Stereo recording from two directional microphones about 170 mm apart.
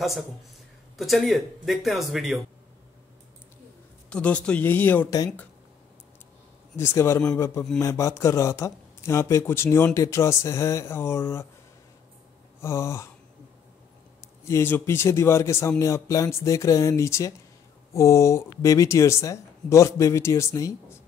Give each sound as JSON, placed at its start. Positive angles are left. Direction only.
{"t": 0.9, "sound": "speech", "side_deg": 0}
{"t": 4.1, "sound": "speech", "side_deg": 5}
{"t": 6.8, "sound": "speech", "side_deg": 15}
{"t": 12.6, "sound": "speech", "side_deg": 15}
{"t": 14.4, "sound": "speech", "side_deg": 15}